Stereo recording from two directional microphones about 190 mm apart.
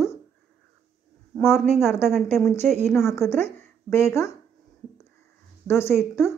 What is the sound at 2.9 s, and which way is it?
Speech, 10° left (ahead or behind).